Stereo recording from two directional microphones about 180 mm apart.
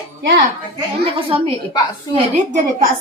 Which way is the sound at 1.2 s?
30° right (ahead or behind).